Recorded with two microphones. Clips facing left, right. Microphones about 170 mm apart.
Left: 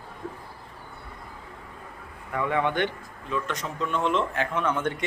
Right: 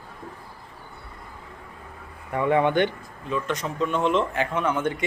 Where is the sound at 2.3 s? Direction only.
25° right (ahead or behind).